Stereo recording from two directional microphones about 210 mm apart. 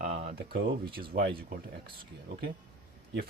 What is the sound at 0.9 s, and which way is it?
Speech, 45° right (ahead or behind).